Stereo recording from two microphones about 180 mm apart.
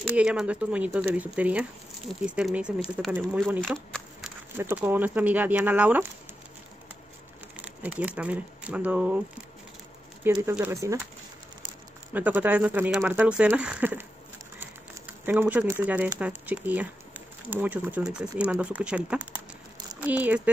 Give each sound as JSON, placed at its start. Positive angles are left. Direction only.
{"t": 0.0, "sound": "speech", "side_deg": -5}
{"t": 3.7, "sound": "speech", "side_deg": 5}
{"t": 4.6, "sound": "speech", "side_deg": -10}
{"t": 7.6, "sound": "crumpling", "side_deg": -5}
{"t": 8.2, "sound": "speech", "side_deg": -10}
{"t": 10.5, "sound": "speech", "side_deg": -15}
{"t": 12.1, "sound": "speech", "side_deg": -10}
{"t": 15.2, "sound": "speech", "side_deg": -10}